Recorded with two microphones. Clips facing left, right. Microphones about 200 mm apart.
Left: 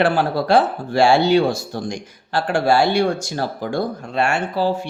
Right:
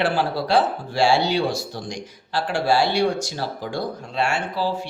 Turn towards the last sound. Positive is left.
turn(degrees=50)  # may be behind; listen again after turning